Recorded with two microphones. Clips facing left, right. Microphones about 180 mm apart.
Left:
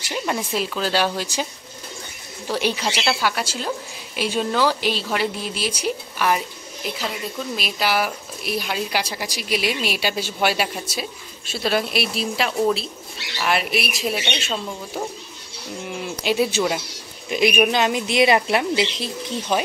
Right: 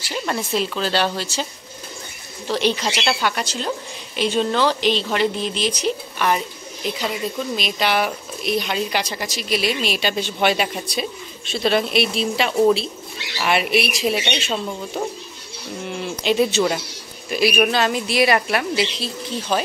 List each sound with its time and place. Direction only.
0.1 s a woman's voice: 10° left (ahead or behind)
16.2 s a woman's voice: 10° left (ahead or behind)
17.3 s a woman's voice: 20° left (ahead or behind)